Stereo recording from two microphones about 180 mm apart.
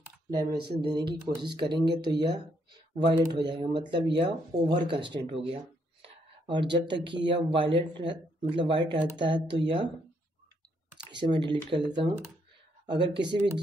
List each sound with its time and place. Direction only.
0.3 s speech: 20° right (ahead or behind)
6.0 s a sound: 25° right (ahead or behind)
7.2 s speech: 30° right (ahead or behind)
11.1 s speech: 25° right (ahead or behind)